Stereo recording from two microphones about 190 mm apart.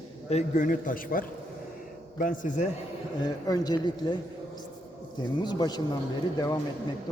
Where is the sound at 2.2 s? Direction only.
45° left (ahead or behind).